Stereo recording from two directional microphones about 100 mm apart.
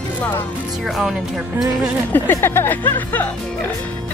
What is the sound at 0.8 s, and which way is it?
Speech, centre (ahead or behind).